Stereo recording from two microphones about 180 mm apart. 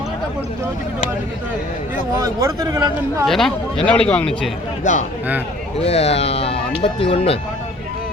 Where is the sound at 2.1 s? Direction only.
20° right (ahead or behind).